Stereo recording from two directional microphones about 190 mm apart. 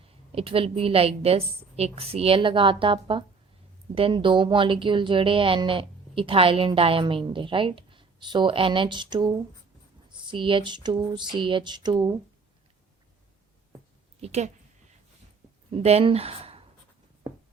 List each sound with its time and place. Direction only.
0.3 s a woman's voice: 30° right (ahead or behind)
14.2 s a woman's voice: 35° right (ahead or behind)
15.7 s speech: 30° right (ahead or behind)